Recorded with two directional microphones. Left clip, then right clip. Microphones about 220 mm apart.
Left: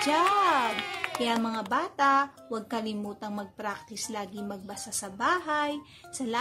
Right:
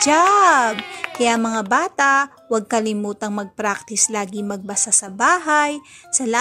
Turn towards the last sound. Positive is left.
turn(degrees=-35)  # may be behind; listen again after turning